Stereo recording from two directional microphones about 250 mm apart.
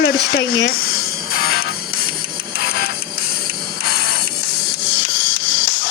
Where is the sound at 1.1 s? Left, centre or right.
Left.